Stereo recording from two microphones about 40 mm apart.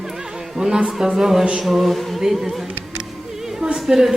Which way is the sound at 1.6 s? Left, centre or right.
Centre.